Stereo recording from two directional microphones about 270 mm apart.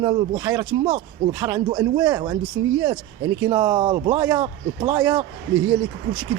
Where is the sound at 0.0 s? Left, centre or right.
Centre.